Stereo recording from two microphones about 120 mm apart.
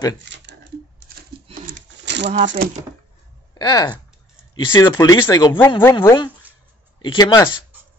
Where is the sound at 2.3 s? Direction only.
75° right (ahead or behind).